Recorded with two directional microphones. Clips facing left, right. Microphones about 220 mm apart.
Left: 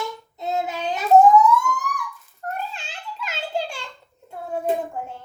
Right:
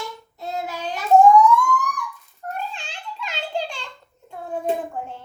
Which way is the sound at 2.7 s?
5° left (ahead or behind).